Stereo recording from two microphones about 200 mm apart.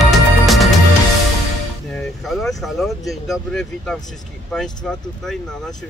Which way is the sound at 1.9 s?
Centre (ahead or behind).